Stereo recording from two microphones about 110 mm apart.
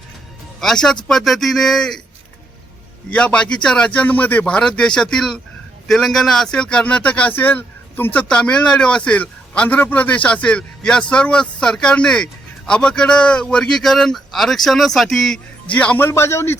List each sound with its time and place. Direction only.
0.6 s speech: 5° left (ahead or behind)
3.1 s speech: 10° left (ahead or behind)
16.0 s speech: 25° left (ahead or behind)